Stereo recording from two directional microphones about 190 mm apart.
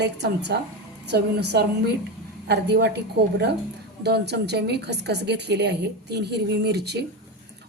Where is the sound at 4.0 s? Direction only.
60° right (ahead or behind).